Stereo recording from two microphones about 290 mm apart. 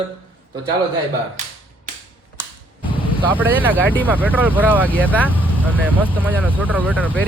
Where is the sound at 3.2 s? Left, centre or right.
Centre.